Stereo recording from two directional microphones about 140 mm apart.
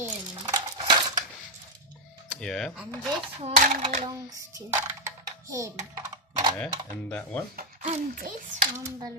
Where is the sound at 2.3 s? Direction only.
5° left (ahead or behind).